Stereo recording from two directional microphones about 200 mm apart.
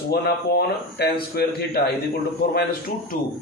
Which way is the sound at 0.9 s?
50° left (ahead or behind).